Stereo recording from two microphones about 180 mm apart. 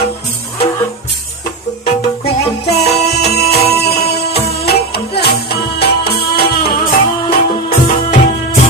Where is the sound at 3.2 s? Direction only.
65° left (ahead or behind).